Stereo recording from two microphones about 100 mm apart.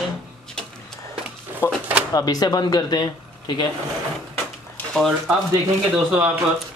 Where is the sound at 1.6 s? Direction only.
35° left (ahead or behind).